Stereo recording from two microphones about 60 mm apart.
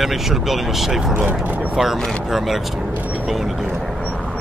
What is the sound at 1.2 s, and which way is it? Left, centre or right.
Speech, right.